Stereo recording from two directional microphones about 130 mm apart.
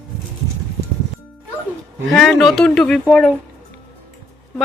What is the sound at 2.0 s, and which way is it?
Speech, 5° left (ahead or behind).